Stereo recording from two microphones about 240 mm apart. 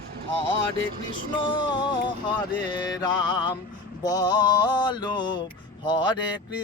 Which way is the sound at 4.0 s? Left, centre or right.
Centre.